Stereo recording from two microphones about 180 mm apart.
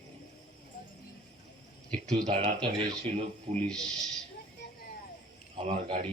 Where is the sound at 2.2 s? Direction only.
40° right (ahead or behind).